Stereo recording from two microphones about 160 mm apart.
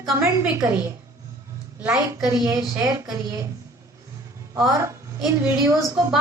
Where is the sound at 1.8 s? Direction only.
20° right (ahead or behind).